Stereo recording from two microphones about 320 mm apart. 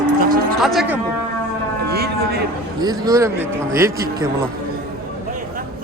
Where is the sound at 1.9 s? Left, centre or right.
Right.